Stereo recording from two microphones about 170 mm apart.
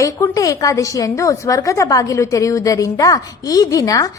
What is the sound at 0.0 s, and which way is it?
A woman's voice, 20° left (ahead or behind).